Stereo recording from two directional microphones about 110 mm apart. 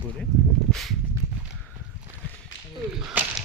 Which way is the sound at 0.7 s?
Centre (ahead or behind).